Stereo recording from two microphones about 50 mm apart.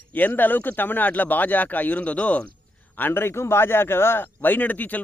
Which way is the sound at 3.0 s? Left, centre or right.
Left.